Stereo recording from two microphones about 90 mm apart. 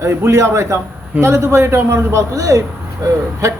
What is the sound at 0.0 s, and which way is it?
A man's voice, 30° right (ahead or behind).